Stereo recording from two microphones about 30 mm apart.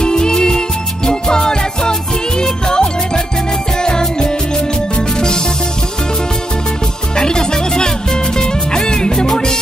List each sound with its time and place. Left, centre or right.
0.0 s music: left
7.2 s music: left